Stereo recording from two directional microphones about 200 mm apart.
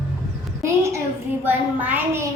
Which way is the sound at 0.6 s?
15° right (ahead or behind).